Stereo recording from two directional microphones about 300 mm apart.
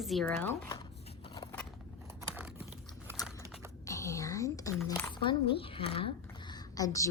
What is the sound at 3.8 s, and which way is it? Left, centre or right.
Whispering, centre.